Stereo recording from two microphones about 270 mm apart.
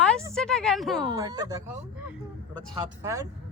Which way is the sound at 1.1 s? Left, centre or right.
Centre.